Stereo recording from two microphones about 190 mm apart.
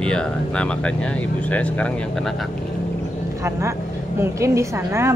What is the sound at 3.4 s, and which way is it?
Speech, 15° right (ahead or behind).